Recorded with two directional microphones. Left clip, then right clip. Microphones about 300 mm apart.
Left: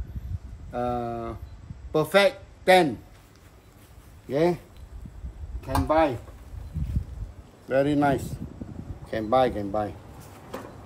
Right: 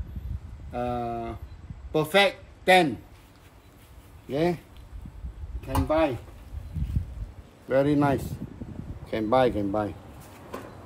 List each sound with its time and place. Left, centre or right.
0.7 s speech: centre
4.3 s speech: centre
5.7 s speech: centre
7.6 s speech: centre